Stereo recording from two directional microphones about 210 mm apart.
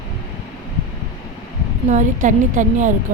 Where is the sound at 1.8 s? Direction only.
35° right (ahead or behind).